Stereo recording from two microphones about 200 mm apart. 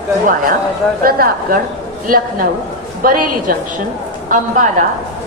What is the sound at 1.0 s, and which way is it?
Speech, 45° right (ahead or behind).